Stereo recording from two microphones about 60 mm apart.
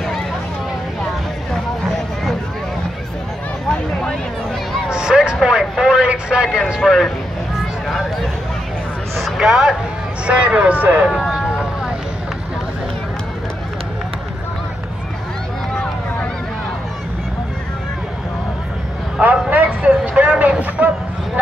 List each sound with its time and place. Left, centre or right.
4.8 s music: centre
5.4 s vehicle: centre
6.7 s a man's voice: centre
9.1 s a sound: centre
9.5 s speech: centre; by 11.1 s right
11.1 s vehicle: centre
19.2 s a sound: right